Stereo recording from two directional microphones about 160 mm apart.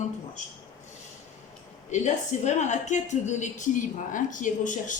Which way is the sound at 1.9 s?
45° left (ahead or behind).